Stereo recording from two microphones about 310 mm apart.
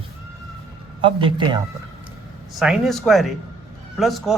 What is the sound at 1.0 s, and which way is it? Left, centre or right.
Speech, centre.